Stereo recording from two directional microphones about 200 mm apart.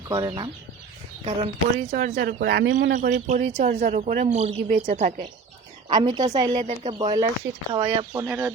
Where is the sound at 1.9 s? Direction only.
45° right (ahead or behind).